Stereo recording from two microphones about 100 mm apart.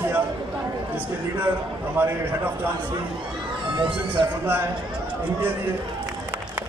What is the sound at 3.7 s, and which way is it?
Speech, 60° right (ahead or behind).